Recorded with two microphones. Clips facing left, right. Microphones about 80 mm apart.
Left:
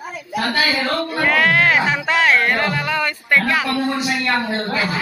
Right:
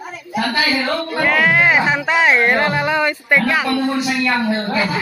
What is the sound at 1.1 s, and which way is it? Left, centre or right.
Speech, centre.